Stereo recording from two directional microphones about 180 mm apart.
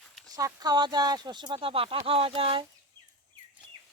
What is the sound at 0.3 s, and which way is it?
Speech, 20° right (ahead or behind).